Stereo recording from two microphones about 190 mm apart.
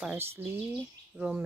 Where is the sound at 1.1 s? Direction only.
5° right (ahead or behind).